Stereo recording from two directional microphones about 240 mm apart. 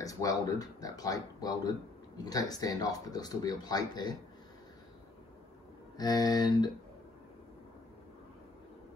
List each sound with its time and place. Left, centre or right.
0.0 s speech: centre
5.9 s speech: centre